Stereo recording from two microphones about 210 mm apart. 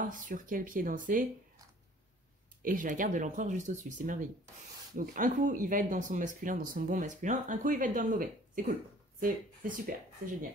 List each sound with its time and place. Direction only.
0.0 s speech: 40° right (ahead or behind)
2.6 s speech: 40° right (ahead or behind)